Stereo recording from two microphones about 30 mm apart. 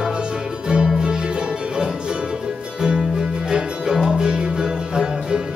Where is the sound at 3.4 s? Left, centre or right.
Right.